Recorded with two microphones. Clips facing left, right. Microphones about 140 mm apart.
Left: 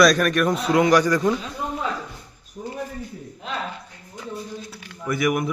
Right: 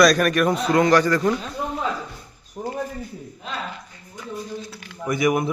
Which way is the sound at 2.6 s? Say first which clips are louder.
Right 4 dB; 60° right (ahead or behind).